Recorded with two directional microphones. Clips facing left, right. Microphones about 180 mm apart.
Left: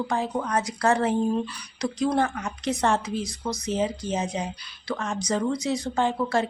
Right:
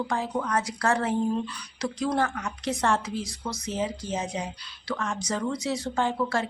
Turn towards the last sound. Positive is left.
turn(degrees=20)  # may be behind; listen again after turning